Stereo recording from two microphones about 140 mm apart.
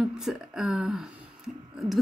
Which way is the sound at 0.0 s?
5° right (ahead or behind).